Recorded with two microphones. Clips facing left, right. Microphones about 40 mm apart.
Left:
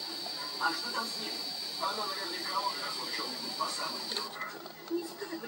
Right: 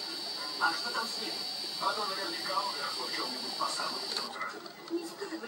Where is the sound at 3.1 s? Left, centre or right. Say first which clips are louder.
Right 1 dB; centre.